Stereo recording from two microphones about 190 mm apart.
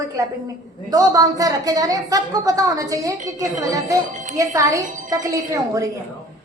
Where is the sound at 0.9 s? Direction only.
20° right (ahead or behind).